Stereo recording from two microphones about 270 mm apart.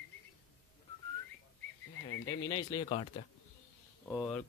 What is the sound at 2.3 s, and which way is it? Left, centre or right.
Speech, centre.